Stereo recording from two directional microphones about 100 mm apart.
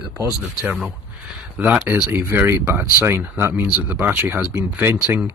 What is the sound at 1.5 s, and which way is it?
Speech, 15° right (ahead or behind).